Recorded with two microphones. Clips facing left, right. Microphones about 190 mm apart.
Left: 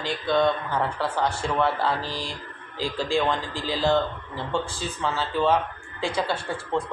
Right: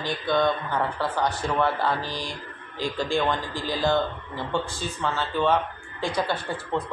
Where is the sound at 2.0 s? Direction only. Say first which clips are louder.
Even; 30° left (ahead or behind).